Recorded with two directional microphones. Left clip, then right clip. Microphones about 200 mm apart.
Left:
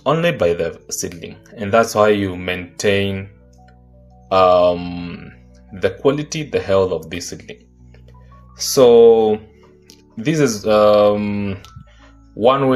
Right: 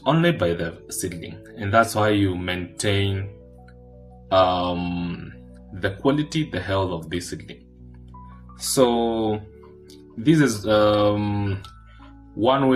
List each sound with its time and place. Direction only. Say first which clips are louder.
0.0 s speech: left 5 dB; 20° left (ahead or behind)
4.3 s speech: left 7 dB; 20° left (ahead or behind)
8.5 s speech: left 10 dB; 25° left (ahead or behind)
12.4 s speech: left 6 dB; 20° left (ahead or behind)